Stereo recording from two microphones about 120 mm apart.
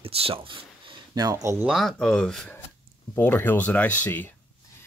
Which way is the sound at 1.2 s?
25° right (ahead or behind).